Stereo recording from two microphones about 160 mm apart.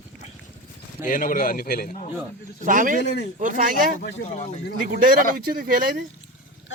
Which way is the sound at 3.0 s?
90° left.